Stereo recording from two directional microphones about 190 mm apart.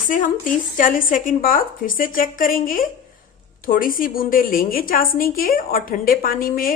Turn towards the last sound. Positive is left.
turn(degrees=45)  # may be behind; listen again after turning